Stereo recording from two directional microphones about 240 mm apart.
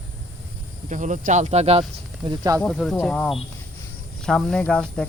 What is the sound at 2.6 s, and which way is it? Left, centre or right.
Speech, centre.